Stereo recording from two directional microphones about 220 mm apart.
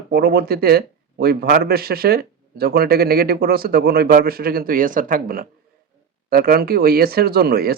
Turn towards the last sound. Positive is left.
turn(degrees=-45)  # may be behind; listen again after turning